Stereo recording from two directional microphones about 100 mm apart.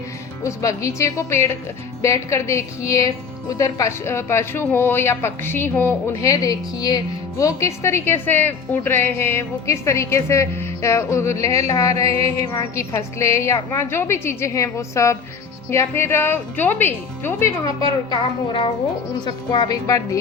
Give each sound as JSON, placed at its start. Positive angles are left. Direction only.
{"t": 0.4, "sound": "a woman's voice", "side_deg": 30}
{"t": 6.1, "sound": "speech", "side_deg": 35}
{"t": 19.2, "sound": "speech", "side_deg": 50}